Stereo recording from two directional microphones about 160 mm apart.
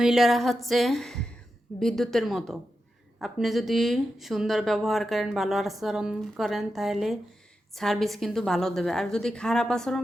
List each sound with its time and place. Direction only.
0.0 s speech: centre (ahead or behind)